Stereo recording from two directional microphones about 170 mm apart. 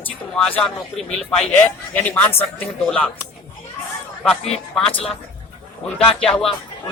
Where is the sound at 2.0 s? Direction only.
10° left (ahead or behind).